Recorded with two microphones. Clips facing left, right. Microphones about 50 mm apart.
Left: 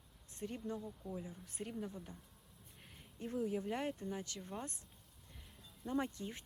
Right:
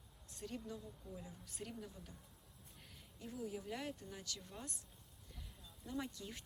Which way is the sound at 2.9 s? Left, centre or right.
Left.